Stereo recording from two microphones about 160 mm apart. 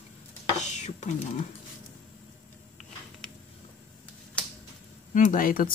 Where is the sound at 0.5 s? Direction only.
45° left (ahead or behind).